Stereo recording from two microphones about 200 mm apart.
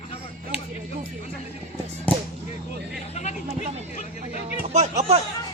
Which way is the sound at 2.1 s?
5° left (ahead or behind).